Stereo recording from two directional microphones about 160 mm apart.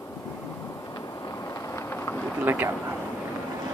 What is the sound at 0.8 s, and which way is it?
Vehicle, 20° left (ahead or behind).